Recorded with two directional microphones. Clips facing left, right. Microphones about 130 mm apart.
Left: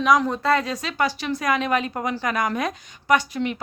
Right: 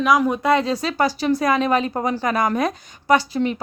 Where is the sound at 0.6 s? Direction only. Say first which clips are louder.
Right 4 dB; 35° right (ahead or behind).